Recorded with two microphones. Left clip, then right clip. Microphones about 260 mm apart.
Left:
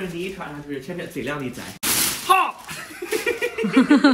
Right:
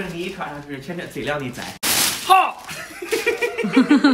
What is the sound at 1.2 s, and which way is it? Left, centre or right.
Speech, centre.